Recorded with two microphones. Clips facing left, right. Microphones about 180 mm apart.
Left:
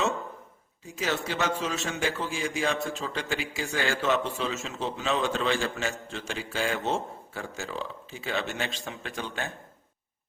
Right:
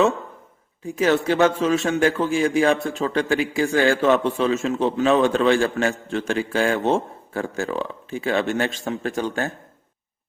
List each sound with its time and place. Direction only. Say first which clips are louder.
0.9 s a man's voice: right 11 dB; 55° right (ahead or behind)